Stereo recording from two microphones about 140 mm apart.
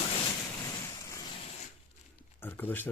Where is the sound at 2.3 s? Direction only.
15° left (ahead or behind).